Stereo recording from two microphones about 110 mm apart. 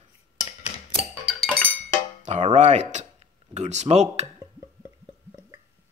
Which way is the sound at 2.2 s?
90° right.